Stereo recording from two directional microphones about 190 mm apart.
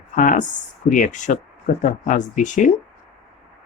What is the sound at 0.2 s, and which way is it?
Speech, 45° left (ahead or behind).